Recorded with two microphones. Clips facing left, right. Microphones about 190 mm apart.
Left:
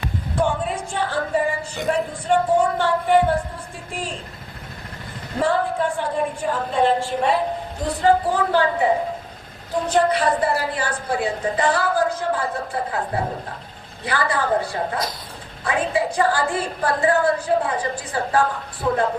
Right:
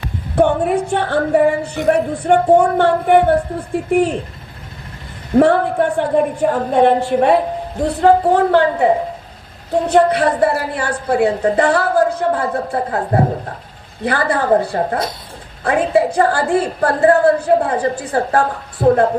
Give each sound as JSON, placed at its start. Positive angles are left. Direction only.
{"t": 0.3, "sound": "a woman's voice", "side_deg": -60}
{"t": 5.4, "sound": "a woman's voice", "side_deg": -60}
{"t": 9.9, "sound": "a woman's voice", "side_deg": -60}
{"t": 13.0, "sound": "speech", "side_deg": -45}
{"t": 14.0, "sound": "a woman's voice", "side_deg": -55}
{"t": 15.6, "sound": "a woman's voice", "side_deg": -60}